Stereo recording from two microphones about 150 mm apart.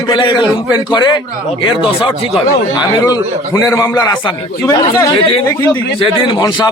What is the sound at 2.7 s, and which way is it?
A man's voice, 25° left (ahead or behind).